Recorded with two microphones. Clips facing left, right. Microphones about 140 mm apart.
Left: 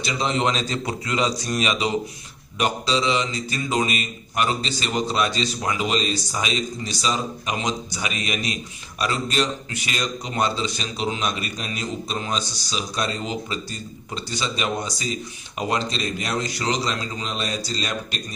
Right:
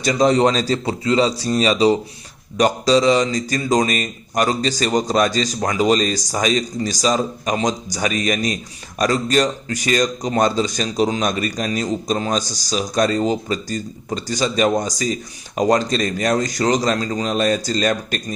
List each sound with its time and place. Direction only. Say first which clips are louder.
0.0 s a man's voice: right 8 dB; 40° right (ahead or behind)